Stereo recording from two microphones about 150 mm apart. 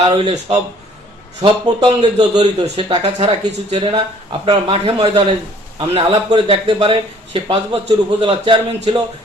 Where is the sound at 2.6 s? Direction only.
40° right (ahead or behind).